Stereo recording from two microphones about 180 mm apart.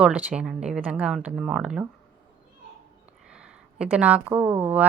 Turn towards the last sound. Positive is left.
turn(degrees=-10)  # may be behind; listen again after turning